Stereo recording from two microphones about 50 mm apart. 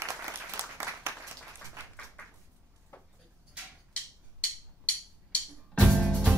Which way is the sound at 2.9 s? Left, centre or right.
Left.